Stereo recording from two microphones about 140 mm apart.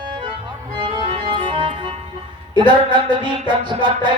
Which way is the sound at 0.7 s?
35° right (ahead or behind).